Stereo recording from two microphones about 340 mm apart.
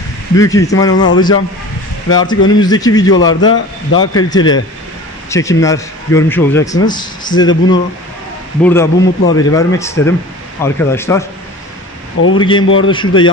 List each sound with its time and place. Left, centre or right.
0.4 s a man's voice: centre
12.4 s speech: centre
12.6 s a man's voice: left
12.9 s speech: centre